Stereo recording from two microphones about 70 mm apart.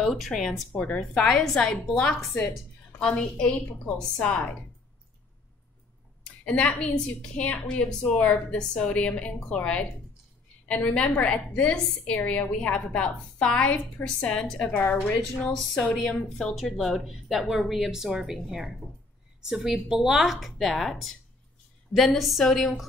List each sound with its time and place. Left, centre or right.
0.0 s a woman's voice: centre
0.7 s a woman's voice: centre
6.2 s a woman's voice: centre
15.1 s a woman's voice: centre